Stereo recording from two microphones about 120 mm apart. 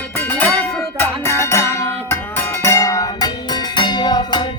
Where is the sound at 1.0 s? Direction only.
25° left (ahead or behind).